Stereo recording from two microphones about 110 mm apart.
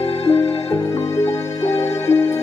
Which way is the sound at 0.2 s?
60° left (ahead or behind).